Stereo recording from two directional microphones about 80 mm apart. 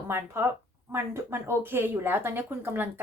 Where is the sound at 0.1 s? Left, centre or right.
Right.